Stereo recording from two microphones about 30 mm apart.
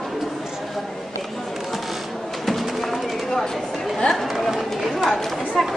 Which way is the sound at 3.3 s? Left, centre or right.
Centre.